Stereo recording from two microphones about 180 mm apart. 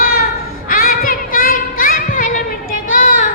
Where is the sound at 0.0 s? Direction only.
55° left (ahead or behind).